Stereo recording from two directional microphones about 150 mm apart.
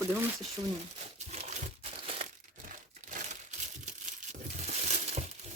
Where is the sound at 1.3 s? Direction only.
50° right (ahead or behind).